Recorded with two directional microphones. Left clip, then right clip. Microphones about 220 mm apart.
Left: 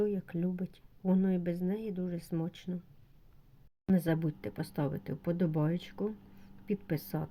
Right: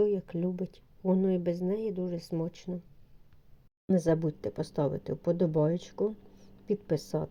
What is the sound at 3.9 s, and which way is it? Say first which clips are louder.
Speech: right 5 dB; 15° right (ahead or behind).